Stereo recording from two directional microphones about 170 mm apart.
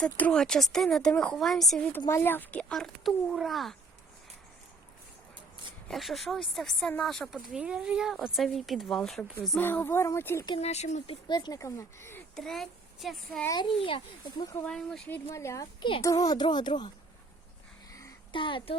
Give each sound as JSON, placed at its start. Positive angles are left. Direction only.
{"t": 0.0, "sound": "speech", "side_deg": 5}
{"t": 2.0, "sound": "speech", "side_deg": 15}
{"t": 5.9, "sound": "speech", "side_deg": 0}
{"t": 9.6, "sound": "speech", "side_deg": 10}
{"t": 10.6, "sound": "speech", "side_deg": 40}
{"t": 12.4, "sound": "speech", "side_deg": 0}
{"t": 13.6, "sound": "speech", "side_deg": 30}
{"t": 14.6, "sound": "speech", "side_deg": 5}
{"t": 15.3, "sound": "speech", "side_deg": 20}
{"t": 17.9, "sound": "a sound", "side_deg": 25}